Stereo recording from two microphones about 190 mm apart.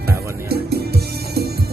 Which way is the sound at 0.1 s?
55° right (ahead or behind).